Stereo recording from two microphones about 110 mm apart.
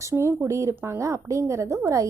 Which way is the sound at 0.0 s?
25° right (ahead or behind).